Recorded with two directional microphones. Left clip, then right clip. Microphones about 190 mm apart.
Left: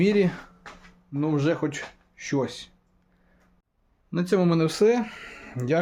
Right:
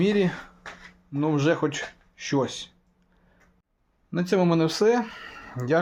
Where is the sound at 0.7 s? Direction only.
60° right (ahead or behind).